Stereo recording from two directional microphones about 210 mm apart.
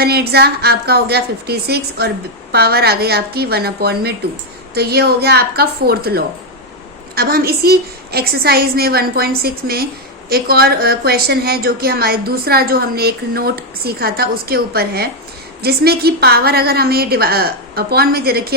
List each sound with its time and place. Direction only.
0.0 s a woman's voice: 50° right (ahead or behind)